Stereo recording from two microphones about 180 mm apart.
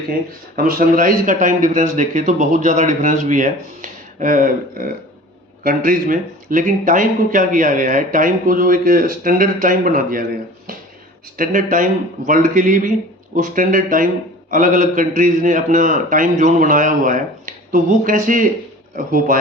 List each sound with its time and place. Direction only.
0.5 s speech: 50° right (ahead or behind)
11.3 s speech: 50° right (ahead or behind)